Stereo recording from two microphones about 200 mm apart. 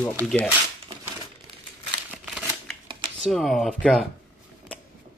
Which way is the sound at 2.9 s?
25° right (ahead or behind).